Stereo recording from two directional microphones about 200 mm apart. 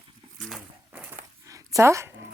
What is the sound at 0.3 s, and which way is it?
Zipper, centre (ahead or behind).